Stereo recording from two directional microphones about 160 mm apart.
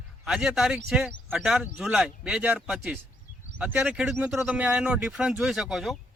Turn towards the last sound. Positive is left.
turn(degrees=0)  # may be behind; listen again after turning